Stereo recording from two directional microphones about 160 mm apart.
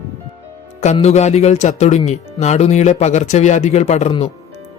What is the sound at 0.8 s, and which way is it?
Speech, 45° left (ahead or behind).